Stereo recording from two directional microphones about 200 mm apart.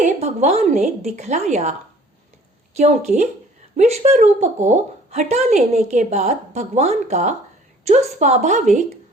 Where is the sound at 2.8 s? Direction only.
35° right (ahead or behind).